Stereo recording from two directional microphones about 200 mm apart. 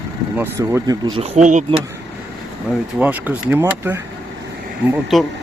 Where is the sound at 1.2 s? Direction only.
35° right (ahead or behind).